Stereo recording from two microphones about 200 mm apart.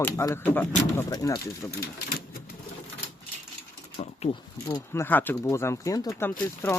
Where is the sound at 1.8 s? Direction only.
50° left (ahead or behind).